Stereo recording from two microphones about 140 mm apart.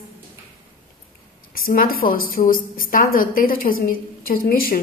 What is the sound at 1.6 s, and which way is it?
A woman's voice, 90° left.